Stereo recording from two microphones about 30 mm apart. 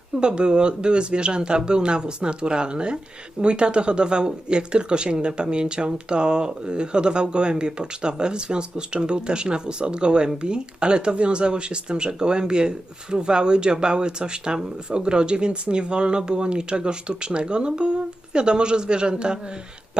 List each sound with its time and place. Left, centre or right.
0.2 s speech: right